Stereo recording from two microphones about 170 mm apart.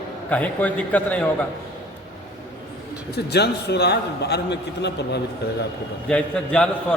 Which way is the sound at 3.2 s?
75° left (ahead or behind).